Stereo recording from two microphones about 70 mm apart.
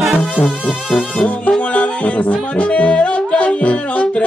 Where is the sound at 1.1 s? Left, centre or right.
Left.